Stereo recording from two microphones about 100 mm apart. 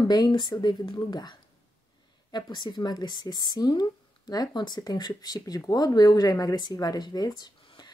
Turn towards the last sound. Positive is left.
turn(degrees=45)  # may be behind; listen again after turning